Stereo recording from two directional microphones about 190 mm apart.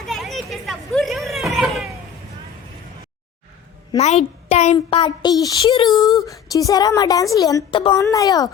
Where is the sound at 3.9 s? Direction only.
35° left (ahead or behind); by 8.4 s 20° left (ahead or behind).